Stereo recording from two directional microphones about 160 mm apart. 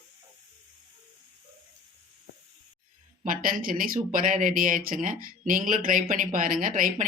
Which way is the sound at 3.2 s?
60° right (ahead or behind).